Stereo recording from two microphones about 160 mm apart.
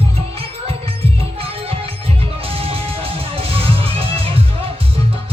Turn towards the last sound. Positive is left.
turn(degrees=-35)  # may be behind; listen again after turning